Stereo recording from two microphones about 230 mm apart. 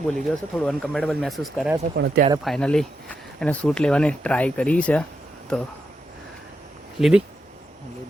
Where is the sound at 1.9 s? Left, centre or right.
Right.